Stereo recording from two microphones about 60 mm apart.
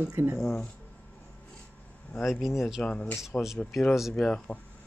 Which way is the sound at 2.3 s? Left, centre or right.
Centre.